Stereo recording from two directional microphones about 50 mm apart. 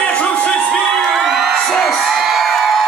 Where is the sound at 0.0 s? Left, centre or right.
Left.